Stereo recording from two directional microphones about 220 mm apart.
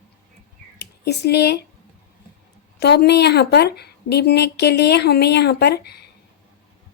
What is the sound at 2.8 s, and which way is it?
Speech, 50° left (ahead or behind).